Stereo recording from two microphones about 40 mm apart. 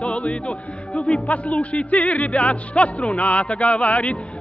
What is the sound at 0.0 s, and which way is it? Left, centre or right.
Speech, left.